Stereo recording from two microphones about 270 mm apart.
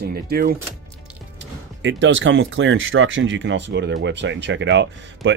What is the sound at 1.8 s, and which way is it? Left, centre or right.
Speech, right.